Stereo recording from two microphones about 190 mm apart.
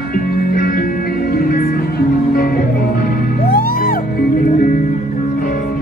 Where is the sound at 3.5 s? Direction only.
50° left (ahead or behind).